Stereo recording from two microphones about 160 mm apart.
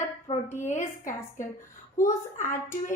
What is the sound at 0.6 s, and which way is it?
Speech, 50° left (ahead or behind).